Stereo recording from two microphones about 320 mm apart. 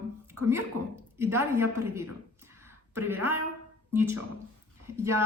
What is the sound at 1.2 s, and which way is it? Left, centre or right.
A man's voice, centre.